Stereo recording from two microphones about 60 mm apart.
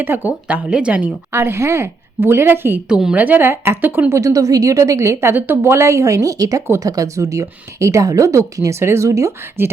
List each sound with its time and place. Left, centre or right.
0.0 s speech: right
1.3 s a woman's voice: right
2.9 s a woman's voice: centre
3.2 s speech: right
3.5 s a woman's voice: right
3.8 s speech: right
4.1 s speech: right
5.2 s speech: right
8.8 s a woman's voice: right
9.0 s speech: right
9.6 s a woman's voice: right